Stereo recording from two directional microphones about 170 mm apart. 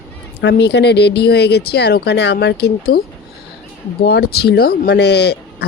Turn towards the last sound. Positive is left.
turn(degrees=80)